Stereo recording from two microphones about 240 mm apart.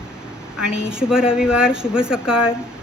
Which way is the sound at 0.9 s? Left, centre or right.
Centre.